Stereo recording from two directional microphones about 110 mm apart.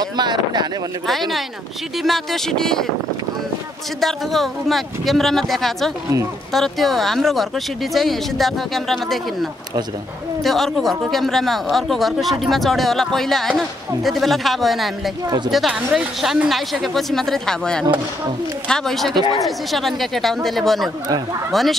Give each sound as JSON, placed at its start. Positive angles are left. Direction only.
{"t": 0.0, "sound": "speech", "side_deg": -40}
{"t": 2.0, "sound": "speech", "side_deg": 0}
{"t": 4.0, "sound": "speech", "side_deg": 0}
{"t": 15.2, "sound": "speech", "side_deg": -40}
{"t": 15.5, "sound": "speech", "side_deg": -5}